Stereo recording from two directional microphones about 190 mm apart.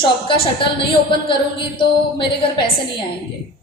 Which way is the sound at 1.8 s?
25° left (ahead or behind).